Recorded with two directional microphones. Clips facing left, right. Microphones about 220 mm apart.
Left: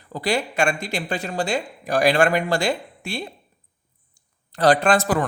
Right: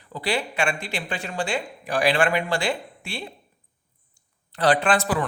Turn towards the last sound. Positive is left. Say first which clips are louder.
# left 3 dB
turn(degrees=45)  # may be behind; listen again after turning